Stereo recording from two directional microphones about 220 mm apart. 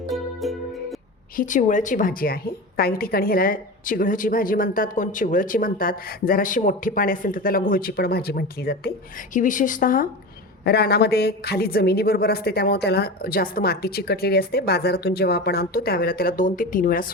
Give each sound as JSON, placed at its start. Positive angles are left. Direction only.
{"t": 0.1, "sound": "music", "side_deg": 0}
{"t": 1.4, "sound": "a woman's voice", "side_deg": 35}